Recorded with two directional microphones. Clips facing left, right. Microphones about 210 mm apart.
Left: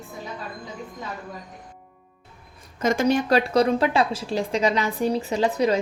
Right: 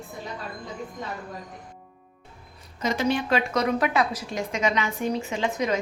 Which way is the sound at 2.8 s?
50° left (ahead or behind).